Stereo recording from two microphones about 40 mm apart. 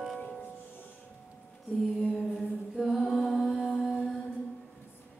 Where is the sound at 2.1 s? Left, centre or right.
Centre.